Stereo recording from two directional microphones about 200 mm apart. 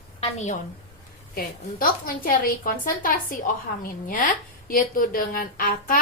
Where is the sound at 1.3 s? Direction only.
45° left (ahead or behind).